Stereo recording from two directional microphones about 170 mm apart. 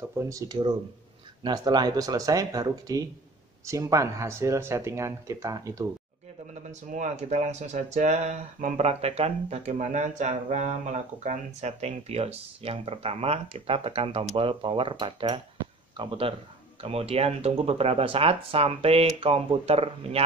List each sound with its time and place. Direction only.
0.1 s speech: 15° right (ahead or behind)
6.5 s speech: 45° right (ahead or behind)